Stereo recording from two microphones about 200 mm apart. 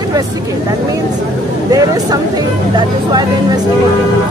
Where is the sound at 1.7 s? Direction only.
15° right (ahead or behind).